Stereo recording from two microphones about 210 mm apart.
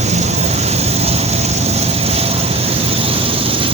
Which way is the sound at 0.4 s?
30° right (ahead or behind).